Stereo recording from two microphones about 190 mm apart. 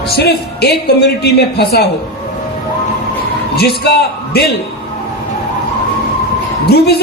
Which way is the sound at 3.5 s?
55° left (ahead or behind).